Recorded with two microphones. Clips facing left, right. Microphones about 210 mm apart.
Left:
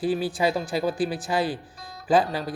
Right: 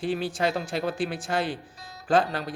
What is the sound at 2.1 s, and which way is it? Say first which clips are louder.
Speech: left 2 dB; 5° left (ahead or behind).